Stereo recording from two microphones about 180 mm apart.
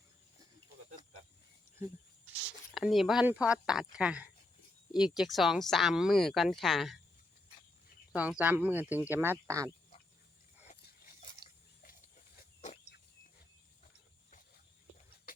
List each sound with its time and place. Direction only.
2.7 s speech: centre (ahead or behind)
8.1 s speech: 5° right (ahead or behind)
11.4 s a sound: 25° left (ahead or behind)